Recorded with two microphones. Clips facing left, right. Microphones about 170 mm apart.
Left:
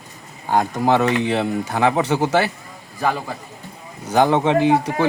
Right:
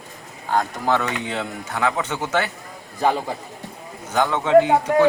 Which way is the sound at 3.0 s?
20° right (ahead or behind).